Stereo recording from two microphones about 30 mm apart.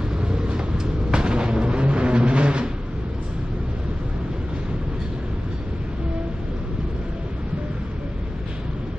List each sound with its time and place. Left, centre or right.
0.3 s vehicle: right